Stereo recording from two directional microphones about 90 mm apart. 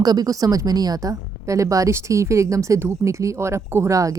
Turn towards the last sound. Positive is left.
turn(degrees=-35)  # may be behind; listen again after turning